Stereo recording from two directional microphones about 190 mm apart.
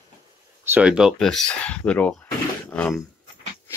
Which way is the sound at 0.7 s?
5° right (ahead or behind).